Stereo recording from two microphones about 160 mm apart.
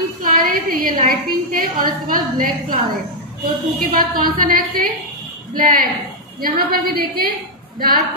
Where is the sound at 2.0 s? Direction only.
60° right (ahead or behind).